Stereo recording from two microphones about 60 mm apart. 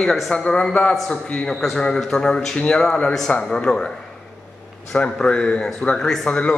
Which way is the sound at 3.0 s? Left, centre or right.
Centre.